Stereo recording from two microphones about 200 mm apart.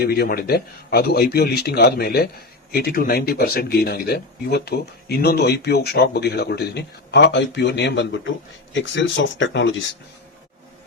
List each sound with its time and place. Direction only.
0.0 s speech: 50° left (ahead or behind)